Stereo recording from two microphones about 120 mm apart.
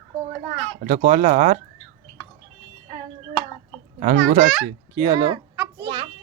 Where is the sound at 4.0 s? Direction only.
90° right.